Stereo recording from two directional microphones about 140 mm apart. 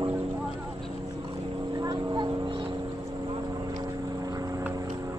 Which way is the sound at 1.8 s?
30° right (ahead or behind).